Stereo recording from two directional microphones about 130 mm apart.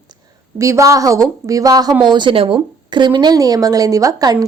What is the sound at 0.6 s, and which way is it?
A woman's voice, 25° right (ahead or behind).